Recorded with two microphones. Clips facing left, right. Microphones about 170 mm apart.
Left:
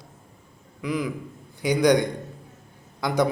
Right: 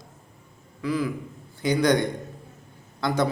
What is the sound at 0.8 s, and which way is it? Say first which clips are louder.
A man's voice: right 1 dB; 15° left (ahead or behind).